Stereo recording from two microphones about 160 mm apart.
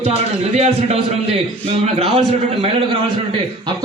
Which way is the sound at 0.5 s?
45° right (ahead or behind).